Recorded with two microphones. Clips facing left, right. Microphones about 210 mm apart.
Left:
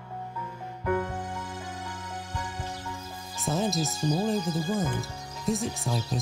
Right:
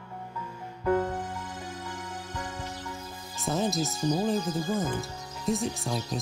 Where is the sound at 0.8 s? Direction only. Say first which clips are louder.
Right 3 dB; 25° right (ahead or behind).